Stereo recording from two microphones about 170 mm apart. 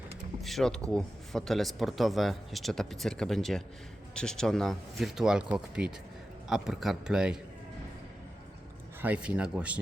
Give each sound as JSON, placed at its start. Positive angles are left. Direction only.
{"t": 0.4, "sound": "speech", "side_deg": 0}
{"t": 9.0, "sound": "speech", "side_deg": -10}